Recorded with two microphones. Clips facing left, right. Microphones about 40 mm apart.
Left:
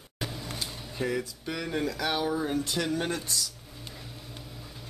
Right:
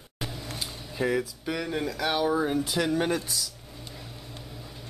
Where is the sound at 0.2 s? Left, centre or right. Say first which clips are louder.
Even; centre.